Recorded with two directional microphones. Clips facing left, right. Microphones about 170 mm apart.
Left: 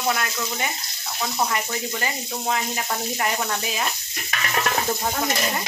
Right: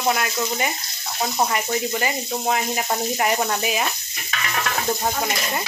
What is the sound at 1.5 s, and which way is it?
Speech, 15° right (ahead or behind).